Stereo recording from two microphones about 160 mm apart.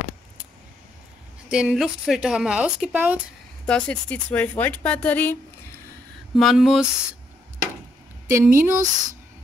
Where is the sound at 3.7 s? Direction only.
5° left (ahead or behind).